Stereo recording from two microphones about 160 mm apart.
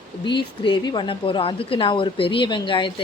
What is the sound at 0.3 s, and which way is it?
Speech, 30° left (ahead or behind).